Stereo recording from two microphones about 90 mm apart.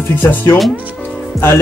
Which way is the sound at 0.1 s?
25° left (ahead or behind).